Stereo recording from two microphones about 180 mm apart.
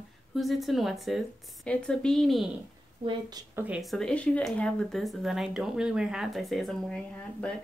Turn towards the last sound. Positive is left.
turn(degrees=0)  # may be behind; listen again after turning